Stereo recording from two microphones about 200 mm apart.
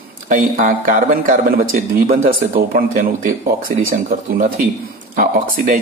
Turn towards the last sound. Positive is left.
turn(degrees=-45)  # may be behind; listen again after turning